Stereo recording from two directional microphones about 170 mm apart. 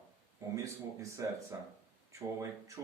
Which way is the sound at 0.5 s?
20° right (ahead or behind).